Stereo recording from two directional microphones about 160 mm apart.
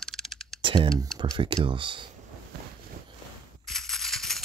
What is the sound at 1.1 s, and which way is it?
Speech, 25° right (ahead or behind).